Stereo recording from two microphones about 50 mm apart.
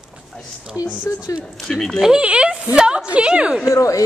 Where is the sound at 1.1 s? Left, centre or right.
Left.